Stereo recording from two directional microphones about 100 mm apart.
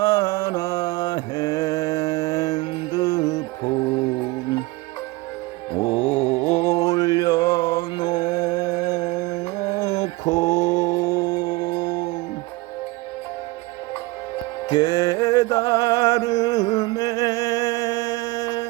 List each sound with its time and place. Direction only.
0.0 s mantra: 35° left (ahead or behind)
5.8 s music: 60° left (ahead or behind)
6.3 s mantra: 25° left (ahead or behind); by 12.0 s 45° left (ahead or behind)
14.7 s music: 50° left (ahead or behind)